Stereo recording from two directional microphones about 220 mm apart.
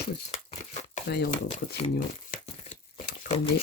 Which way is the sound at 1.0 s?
45° left (ahead or behind).